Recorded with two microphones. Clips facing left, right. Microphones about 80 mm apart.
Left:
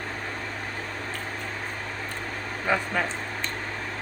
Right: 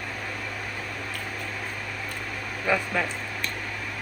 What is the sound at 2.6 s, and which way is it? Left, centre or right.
Speech, left.